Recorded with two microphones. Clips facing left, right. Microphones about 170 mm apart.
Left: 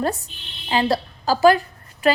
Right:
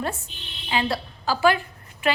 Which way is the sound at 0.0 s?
40° left (ahead or behind).